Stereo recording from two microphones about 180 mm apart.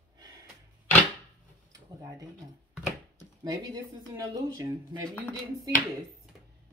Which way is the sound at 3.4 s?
20° right (ahead or behind).